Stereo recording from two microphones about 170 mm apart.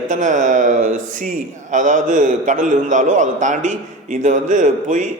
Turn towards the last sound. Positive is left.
turn(degrees=-45)  # may be behind; listen again after turning